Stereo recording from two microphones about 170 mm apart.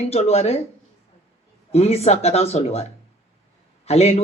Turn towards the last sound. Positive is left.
turn(degrees=40)  # may be behind; listen again after turning